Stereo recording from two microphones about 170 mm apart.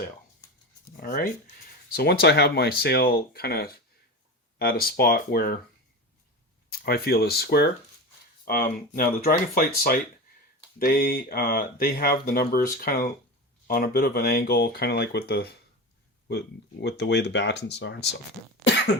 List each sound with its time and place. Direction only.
0.9 s speech: 55° left (ahead or behind)
2.0 s speech: 75° left (ahead or behind)
6.7 s speech: 65° left (ahead or behind)
8.4 s speech: 55° left (ahead or behind)
16.3 s speech: 80° left